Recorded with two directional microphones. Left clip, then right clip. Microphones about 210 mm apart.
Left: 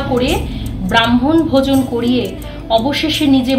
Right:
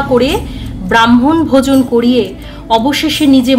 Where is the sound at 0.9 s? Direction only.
50° right (ahead or behind).